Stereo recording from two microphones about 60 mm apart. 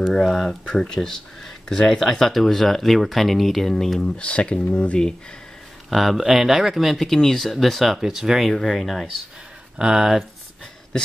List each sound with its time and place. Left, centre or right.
0.1 s speech: centre
4.2 s speech: centre
5.9 s speech: centre
9.8 s speech: centre